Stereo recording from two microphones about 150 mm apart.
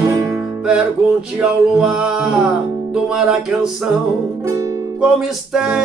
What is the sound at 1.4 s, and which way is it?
Music, 5° right (ahead or behind).